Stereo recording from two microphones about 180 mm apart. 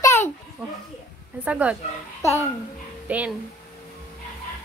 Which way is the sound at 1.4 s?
5° right (ahead or behind).